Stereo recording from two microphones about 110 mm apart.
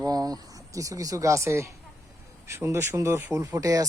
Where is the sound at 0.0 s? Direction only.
35° right (ahead or behind).